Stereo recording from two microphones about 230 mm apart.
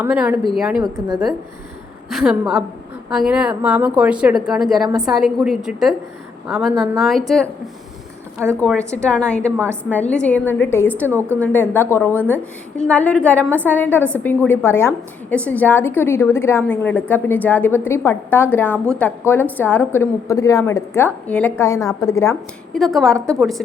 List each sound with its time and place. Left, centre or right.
0.0 s a woman's voice: centre
1.0 s a woman's voice: centre
2.0 s a woman's voice: centre
8.9 s a woman's voice: centre
22.8 s a woman's voice: centre
23.1 s a woman's voice: centre